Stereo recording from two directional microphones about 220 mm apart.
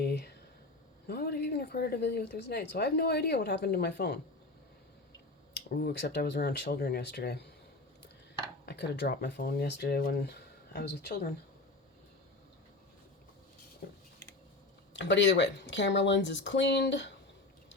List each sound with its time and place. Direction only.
0.0 s a sound: 50° left (ahead or behind)
1.0 s a woman's voice: 45° left (ahead or behind)
5.7 s a woman's voice: 45° left (ahead or behind)
8.6 s a woman's voice: 50° left (ahead or behind)
13.8 s a sound: 50° left (ahead or behind)
14.9 s a woman's voice: 55° left (ahead or behind)